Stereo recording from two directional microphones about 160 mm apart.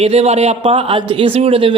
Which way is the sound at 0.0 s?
40° right (ahead or behind).